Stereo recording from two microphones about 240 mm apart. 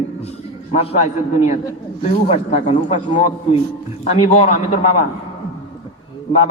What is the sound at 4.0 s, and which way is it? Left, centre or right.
Speech, left.